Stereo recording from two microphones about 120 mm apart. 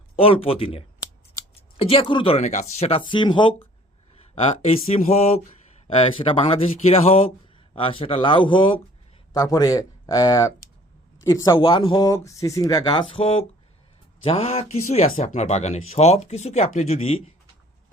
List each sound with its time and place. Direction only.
0.2 s speech: 50° left (ahead or behind)
2.4 s speech: 75° left (ahead or behind)
3.0 s speech: 40° left (ahead or behind)
4.9 s speech: 65° left (ahead or behind)
6.0 s speech: 55° left (ahead or behind)
9.3 s speech: 30° left (ahead or behind)
11.5 s speech: 45° left (ahead or behind)
11.9 s speech: 25° left (ahead or behind); by 17.3 s 55° left (ahead or behind)